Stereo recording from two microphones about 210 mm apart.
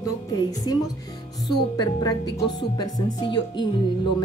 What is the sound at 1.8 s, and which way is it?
Speech, 20° left (ahead or behind).